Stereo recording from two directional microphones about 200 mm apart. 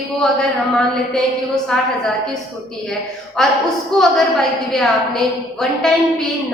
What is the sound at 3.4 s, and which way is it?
A woman's voice, 5° left (ahead or behind).